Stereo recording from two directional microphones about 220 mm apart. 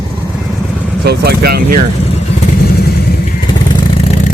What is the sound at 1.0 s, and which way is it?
Speech, 50° right (ahead or behind).